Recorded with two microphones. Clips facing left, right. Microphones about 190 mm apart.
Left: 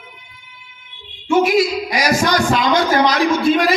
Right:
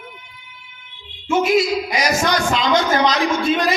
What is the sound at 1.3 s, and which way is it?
A man's voice, 25° right (ahead or behind).